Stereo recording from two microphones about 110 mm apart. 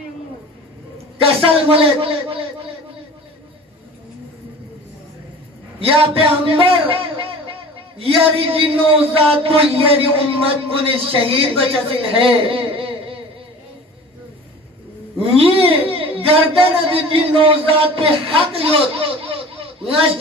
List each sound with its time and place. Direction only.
1.2 s a man's voice: 55° right (ahead or behind)
5.8 s a man's voice: 55° right (ahead or behind)
15.3 s speech: 60° right (ahead or behind)